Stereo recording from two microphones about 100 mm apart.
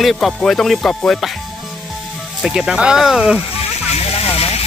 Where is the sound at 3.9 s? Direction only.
80° left.